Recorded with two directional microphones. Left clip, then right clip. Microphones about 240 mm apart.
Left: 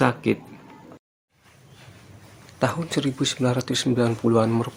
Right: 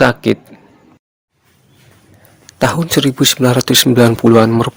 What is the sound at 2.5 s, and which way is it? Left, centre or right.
A man's voice, right.